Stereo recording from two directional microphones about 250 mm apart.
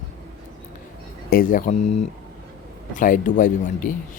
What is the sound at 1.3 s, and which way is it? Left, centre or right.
Speech, left.